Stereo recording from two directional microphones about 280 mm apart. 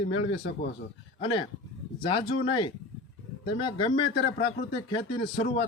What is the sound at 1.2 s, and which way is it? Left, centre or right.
Speech, centre.